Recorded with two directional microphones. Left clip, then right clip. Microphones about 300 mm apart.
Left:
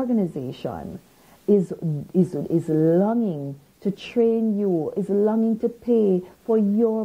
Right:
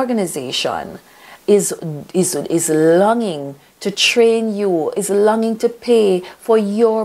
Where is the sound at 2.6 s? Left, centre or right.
Centre.